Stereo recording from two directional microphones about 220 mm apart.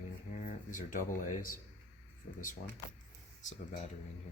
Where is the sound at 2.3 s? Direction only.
35° left (ahead or behind).